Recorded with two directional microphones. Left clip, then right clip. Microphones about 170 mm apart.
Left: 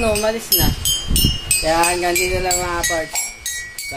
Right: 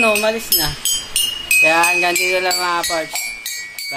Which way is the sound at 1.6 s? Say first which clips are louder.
Right 3 dB; centre (ahead or behind).